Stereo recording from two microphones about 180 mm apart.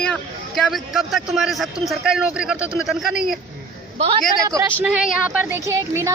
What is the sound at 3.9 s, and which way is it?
Speech, 30° right (ahead or behind).